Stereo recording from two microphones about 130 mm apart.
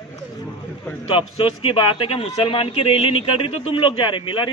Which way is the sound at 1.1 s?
45° left (ahead or behind).